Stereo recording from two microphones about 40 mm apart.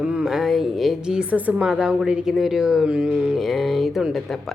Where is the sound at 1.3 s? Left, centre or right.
Right.